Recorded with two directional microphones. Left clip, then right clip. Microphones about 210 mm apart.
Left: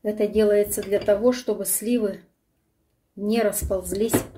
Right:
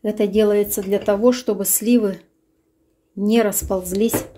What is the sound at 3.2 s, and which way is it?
Speech, 40° right (ahead or behind).